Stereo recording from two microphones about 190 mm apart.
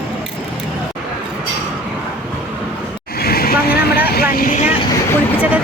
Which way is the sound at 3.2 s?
55° left (ahead or behind).